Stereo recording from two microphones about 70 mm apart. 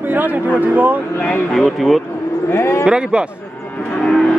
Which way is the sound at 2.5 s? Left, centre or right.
Left.